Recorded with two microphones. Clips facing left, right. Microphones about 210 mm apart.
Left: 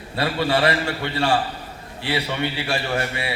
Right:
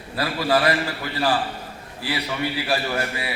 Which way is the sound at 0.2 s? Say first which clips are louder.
Left 1 dB; 30° left (ahead or behind).